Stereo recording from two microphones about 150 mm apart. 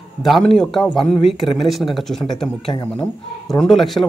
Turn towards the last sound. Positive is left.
turn(degrees=0)  # may be behind; listen again after turning